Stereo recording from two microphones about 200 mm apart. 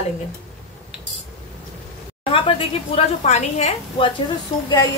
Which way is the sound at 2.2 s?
25° left (ahead or behind).